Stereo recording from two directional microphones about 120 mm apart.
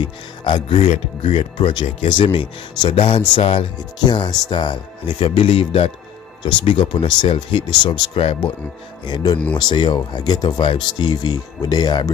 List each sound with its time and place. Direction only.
0.0 s speech: 40° left (ahead or behind)
0.8 s speech: 70° left (ahead or behind)
1.3 s speech: 50° left (ahead or behind)
9.0 s speech: 40° left (ahead or behind)